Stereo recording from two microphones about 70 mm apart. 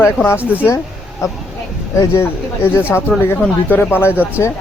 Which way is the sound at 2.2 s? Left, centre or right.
Left.